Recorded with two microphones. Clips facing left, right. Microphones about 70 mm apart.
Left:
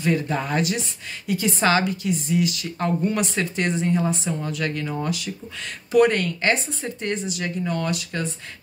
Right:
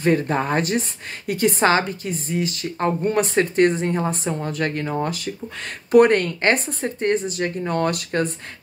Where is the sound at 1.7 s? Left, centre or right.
Right.